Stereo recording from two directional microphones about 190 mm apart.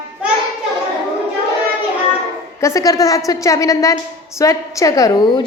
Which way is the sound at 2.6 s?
15° left (ahead or behind).